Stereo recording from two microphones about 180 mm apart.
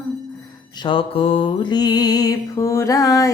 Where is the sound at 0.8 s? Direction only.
30° left (ahead or behind).